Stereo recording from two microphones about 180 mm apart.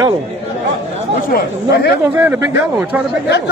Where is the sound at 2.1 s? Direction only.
10° right (ahead or behind).